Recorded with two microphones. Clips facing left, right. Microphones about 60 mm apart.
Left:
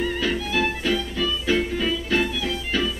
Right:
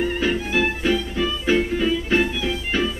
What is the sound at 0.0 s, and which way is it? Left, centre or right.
Music, right.